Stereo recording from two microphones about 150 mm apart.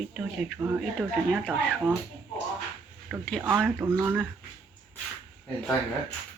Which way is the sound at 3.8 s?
15° right (ahead or behind).